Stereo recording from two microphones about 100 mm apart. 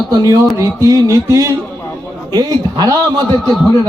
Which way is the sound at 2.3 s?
45° right (ahead or behind).